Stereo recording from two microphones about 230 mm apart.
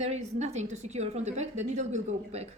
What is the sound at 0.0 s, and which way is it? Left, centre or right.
A woman's voice, right.